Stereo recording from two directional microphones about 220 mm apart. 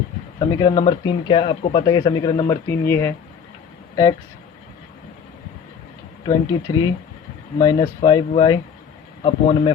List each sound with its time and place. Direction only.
0.3 s a man's voice: 20° left (ahead or behind)
6.2 s speech: 20° left (ahead or behind)